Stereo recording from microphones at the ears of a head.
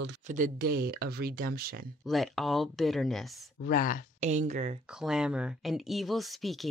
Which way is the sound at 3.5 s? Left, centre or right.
Left.